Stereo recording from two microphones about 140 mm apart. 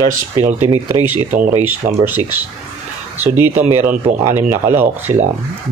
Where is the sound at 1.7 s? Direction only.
15° right (ahead or behind).